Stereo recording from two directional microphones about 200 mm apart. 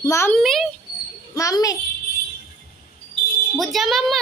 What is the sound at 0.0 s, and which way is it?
Speech, 15° left (ahead or behind).